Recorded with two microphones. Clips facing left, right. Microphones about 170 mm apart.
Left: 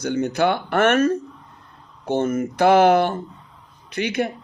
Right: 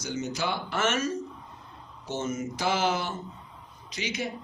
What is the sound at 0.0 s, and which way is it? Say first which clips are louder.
A woman's voice: left 11 dB; 60° left (ahead or behind).